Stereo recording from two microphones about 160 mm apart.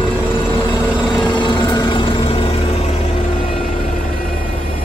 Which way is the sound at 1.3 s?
30° left (ahead or behind).